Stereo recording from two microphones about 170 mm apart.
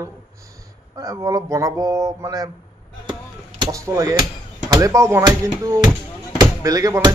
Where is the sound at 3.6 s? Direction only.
20° right (ahead or behind).